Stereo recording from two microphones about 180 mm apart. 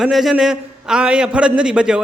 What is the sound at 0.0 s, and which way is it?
A man's voice, centre (ahead or behind).